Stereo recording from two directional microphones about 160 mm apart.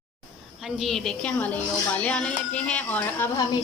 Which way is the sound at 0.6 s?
Centre (ahead or behind).